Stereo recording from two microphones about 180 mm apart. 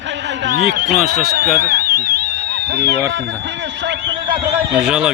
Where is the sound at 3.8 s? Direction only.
80° right.